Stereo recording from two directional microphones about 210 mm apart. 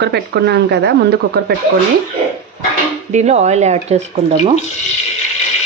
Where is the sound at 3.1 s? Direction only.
30° right (ahead or behind).